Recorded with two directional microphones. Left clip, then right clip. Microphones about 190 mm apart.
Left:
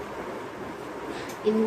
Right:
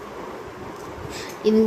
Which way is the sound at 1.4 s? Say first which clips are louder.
Right 6 dB; 60° right (ahead or behind).